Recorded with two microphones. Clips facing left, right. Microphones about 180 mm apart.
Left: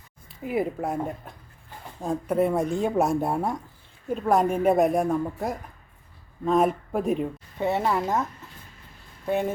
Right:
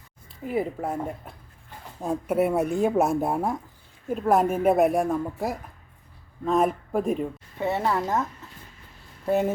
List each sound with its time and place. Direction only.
0.4 s speech: 5° left (ahead or behind)
2.0 s speech: 5° right (ahead or behind)
7.6 s speech: 15° left (ahead or behind)
9.2 s speech: 5° right (ahead or behind)